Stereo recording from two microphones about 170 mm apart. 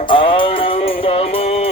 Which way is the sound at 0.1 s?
30° left (ahead or behind).